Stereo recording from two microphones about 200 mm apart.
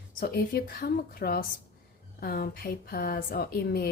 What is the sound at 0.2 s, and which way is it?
Speech, 45° left (ahead or behind).